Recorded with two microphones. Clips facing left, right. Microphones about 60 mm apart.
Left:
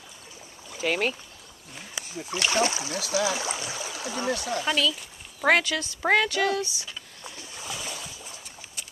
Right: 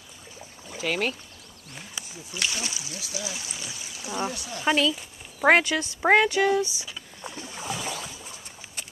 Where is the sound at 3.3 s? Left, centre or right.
Left.